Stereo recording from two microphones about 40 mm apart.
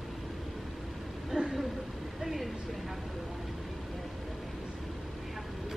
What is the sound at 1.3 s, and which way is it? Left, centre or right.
Vehicle, right.